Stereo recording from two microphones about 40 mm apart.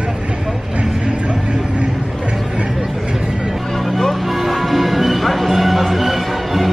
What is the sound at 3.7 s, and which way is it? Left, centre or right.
Music, centre.